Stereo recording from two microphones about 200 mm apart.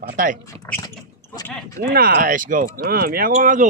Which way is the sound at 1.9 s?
45° right (ahead or behind).